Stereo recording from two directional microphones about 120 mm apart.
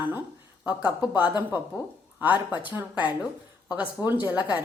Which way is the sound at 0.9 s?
15° right (ahead or behind).